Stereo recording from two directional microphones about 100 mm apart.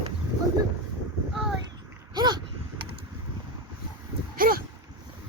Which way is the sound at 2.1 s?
45° right (ahead or behind).